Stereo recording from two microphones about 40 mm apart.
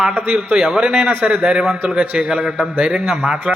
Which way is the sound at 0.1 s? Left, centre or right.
Right.